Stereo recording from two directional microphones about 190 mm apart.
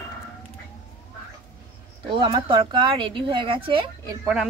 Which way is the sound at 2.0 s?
25° right (ahead or behind).